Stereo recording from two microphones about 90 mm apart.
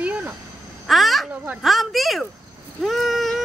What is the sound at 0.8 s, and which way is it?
Speech, centre (ahead or behind).